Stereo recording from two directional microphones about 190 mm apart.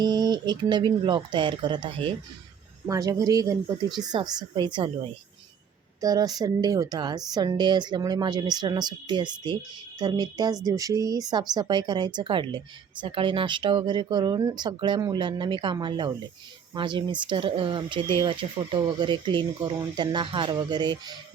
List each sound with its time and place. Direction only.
0.0 s speech: 20° right (ahead or behind)
6.0 s speech: 20° right (ahead or behind)